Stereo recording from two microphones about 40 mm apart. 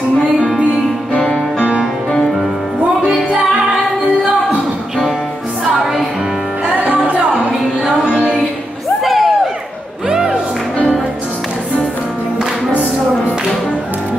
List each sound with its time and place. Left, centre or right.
6.8 s music: right
9.0 s a sound: centre
10.0 s music: centre